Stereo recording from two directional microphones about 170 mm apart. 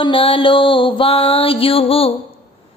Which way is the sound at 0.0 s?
30° left (ahead or behind).